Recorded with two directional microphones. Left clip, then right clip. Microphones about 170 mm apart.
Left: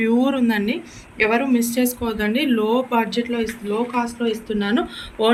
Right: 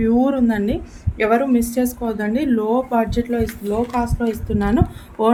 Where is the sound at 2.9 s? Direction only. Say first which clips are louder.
Right 1 dB; 55° right (ahead or behind).